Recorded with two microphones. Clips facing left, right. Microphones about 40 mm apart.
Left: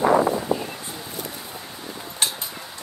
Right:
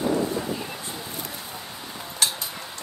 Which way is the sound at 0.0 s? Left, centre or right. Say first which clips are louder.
Left 6 dB; left.